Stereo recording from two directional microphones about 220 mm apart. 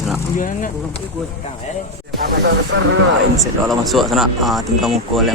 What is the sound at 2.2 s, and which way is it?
Music, 50° right (ahead or behind).